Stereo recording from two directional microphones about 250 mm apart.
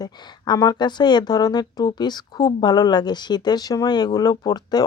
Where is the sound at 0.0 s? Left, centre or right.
Centre.